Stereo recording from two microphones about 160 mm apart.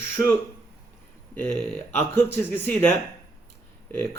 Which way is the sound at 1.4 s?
10° left (ahead or behind).